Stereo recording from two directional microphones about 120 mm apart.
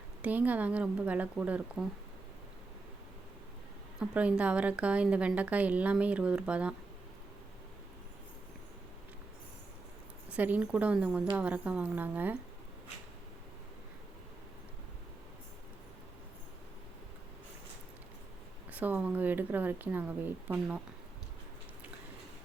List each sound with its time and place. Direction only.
0.2 s speech: 15° right (ahead or behind)
4.0 s speech: 10° right (ahead or behind)
10.2 s speech: 10° right (ahead or behind)
18.7 s speech: 15° right (ahead or behind)